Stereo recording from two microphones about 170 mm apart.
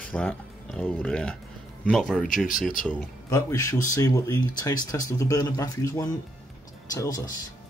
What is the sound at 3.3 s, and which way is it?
Speech, 20° left (ahead or behind).